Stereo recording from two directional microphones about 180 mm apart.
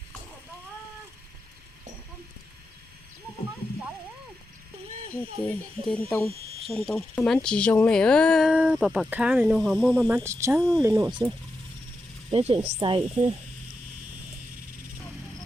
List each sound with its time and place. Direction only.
5.5 s speech: 5° left (ahead or behind)
10.2 s speech: 15° right (ahead or behind)
10.6 s speech: 5° left (ahead or behind)
10.8 s speech: 15° right (ahead or behind)
12.3 s speech: 35° right (ahead or behind)